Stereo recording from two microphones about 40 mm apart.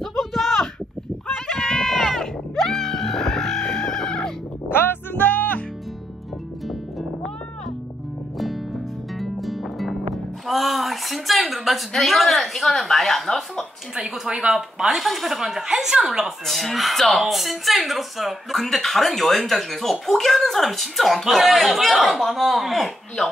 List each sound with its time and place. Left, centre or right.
0.0 s a sound: centre
1.3 s a sound: centre
1.9 s music: centre
4.6 s music: left
9.2 s music: centre
11.4 s speech: centre
14.0 s a woman's voice: centre
16.4 s speech: centre
23.2 s speech: centre